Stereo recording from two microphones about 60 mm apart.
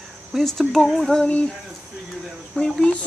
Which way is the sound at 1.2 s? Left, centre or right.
Centre.